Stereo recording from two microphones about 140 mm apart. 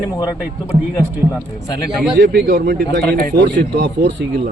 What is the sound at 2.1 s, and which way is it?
Speech, 90° right.